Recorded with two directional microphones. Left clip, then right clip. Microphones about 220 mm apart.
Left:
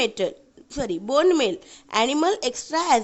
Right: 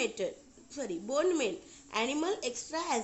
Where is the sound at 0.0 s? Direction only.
40° left (ahead or behind).